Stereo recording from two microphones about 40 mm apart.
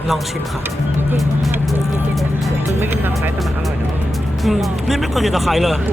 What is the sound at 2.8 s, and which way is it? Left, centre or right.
Speech, right.